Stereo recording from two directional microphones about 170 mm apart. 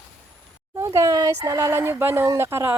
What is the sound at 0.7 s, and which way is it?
Speech, 20° right (ahead or behind).